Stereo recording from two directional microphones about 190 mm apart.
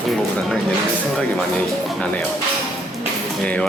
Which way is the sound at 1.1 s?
5° left (ahead or behind).